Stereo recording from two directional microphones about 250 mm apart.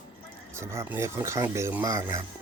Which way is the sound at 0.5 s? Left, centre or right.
Centre.